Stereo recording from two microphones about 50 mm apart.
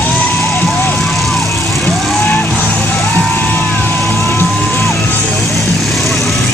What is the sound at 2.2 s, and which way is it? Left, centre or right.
Music, left.